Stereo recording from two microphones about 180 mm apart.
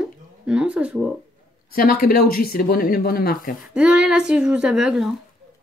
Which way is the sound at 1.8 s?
55° left (ahead or behind).